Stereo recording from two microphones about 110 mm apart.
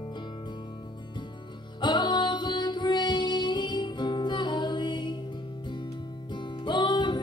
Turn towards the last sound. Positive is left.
turn(degrees=45)  # may be behind; listen again after turning